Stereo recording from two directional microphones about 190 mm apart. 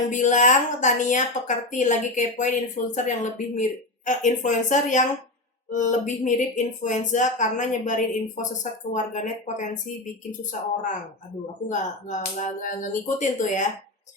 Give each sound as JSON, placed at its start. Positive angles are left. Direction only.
{"t": 0.1, "sound": "a woman's voice", "side_deg": 40}
{"t": 11.7, "sound": "a woman's voice", "side_deg": 40}